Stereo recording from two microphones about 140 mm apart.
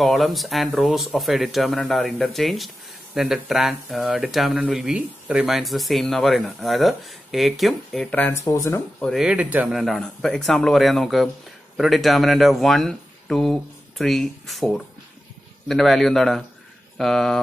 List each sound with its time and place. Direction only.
0.0 s speech: centre (ahead or behind)
8.1 s speech: 10° left (ahead or behind)
8.5 s speech: 25° left (ahead or behind)
9.0 s speech: centre (ahead or behind)